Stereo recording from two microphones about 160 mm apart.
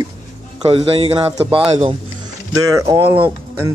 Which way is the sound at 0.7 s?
35° right (ahead or behind).